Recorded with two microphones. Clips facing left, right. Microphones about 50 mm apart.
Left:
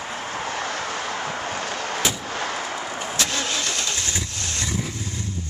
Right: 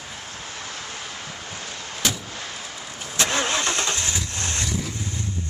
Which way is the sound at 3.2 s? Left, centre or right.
Right.